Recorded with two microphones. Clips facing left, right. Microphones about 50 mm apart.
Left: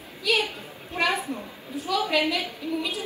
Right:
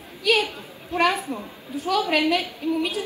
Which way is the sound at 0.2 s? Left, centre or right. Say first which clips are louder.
Right 3 dB; right.